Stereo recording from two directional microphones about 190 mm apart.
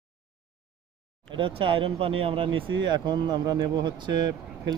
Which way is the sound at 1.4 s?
25° right (ahead or behind).